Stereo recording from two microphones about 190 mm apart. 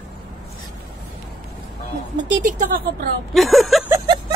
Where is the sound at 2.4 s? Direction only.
45° right (ahead or behind).